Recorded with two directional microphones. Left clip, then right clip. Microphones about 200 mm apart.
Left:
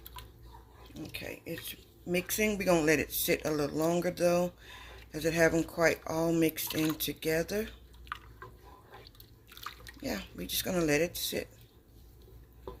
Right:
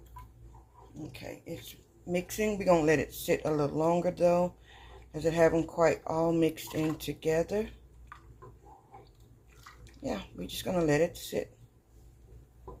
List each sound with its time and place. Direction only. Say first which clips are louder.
1.1 s speech: left 3 dB; 35° left (ahead or behind); by 7.7 s 15° left (ahead or behind)
10.0 s speech: right 1 dB; 15° left (ahead or behind)